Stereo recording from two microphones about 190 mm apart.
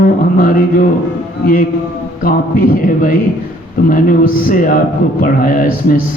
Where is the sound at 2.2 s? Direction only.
50° left (ahead or behind).